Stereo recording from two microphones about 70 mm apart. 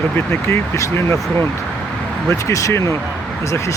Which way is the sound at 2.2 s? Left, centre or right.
Left.